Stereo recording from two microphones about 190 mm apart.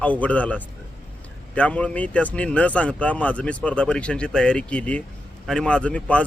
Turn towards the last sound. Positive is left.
turn(degrees=5)  # may be behind; listen again after turning